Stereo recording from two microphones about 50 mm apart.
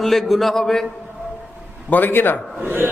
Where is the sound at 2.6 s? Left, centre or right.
Right.